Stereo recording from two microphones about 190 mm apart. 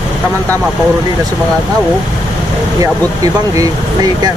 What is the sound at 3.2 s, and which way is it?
Speech, 20° right (ahead or behind).